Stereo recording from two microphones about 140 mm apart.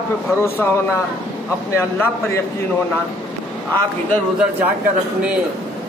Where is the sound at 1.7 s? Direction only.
20° left (ahead or behind).